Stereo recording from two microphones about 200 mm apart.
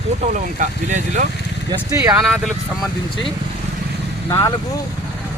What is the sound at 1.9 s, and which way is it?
Speech, 15° right (ahead or behind).